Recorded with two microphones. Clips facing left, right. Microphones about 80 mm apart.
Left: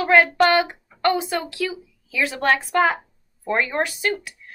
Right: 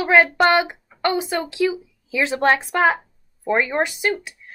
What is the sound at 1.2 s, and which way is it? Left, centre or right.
Speech, centre.